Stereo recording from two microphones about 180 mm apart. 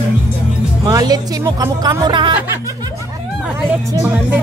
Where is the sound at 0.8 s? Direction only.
20° right (ahead or behind).